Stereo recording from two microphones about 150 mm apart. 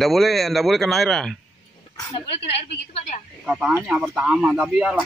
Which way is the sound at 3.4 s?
10° right (ahead or behind).